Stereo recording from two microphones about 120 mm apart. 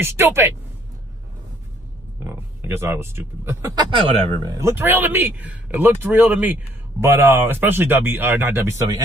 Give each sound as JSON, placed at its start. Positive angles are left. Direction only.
{"t": 0.0, "sound": "speech", "side_deg": -20}
{"t": 2.2, "sound": "speech", "side_deg": -20}
{"t": 3.7, "sound": "speech", "side_deg": -40}
{"t": 4.6, "sound": "a man's voice", "side_deg": -20}